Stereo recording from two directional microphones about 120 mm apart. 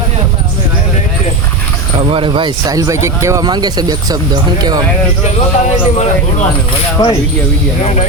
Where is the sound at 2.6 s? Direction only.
30° right (ahead or behind).